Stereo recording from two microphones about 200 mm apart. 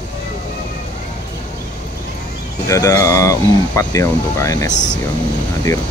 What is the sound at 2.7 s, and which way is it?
Speech, 15° left (ahead or behind).